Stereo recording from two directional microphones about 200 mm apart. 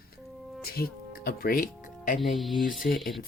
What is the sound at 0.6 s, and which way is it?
Speech, 50° left (ahead or behind).